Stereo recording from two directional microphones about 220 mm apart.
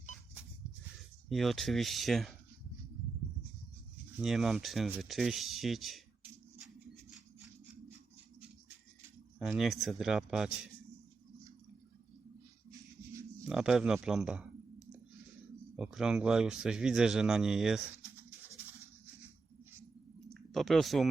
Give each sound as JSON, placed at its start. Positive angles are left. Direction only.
{"t": 1.3, "sound": "a man's voice", "side_deg": 0}
{"t": 4.2, "sound": "speech", "side_deg": 0}
{"t": 9.4, "sound": "a man's voice", "side_deg": 0}
{"t": 13.5, "sound": "a man's voice", "side_deg": -5}
{"t": 20.3, "sound": "a sound", "side_deg": 0}